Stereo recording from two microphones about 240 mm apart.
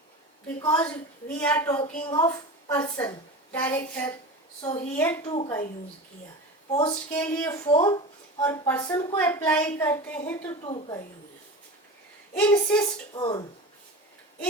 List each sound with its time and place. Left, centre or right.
0.4 s a woman's voice: centre
5.3 s a woman's voice: centre
6.7 s a woman's voice: left
7.1 s a woman's voice: centre
10.7 s a woman's voice: left
12.3 s a woman's voice: centre
13.1 s a woman's voice: centre